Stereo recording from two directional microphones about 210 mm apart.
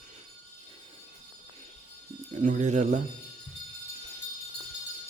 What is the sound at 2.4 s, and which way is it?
Speech, 35° right (ahead or behind).